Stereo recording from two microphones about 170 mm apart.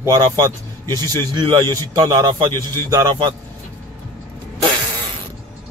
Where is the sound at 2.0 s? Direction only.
20° right (ahead or behind).